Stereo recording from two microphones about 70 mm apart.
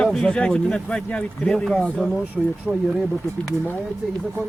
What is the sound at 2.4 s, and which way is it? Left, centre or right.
Speech, centre.